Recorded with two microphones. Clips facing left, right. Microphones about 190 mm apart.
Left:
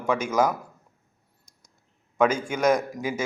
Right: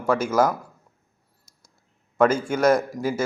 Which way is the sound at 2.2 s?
15° left (ahead or behind).